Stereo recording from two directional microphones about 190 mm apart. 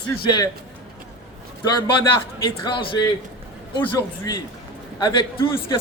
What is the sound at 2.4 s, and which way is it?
Speech, 25° left (ahead or behind).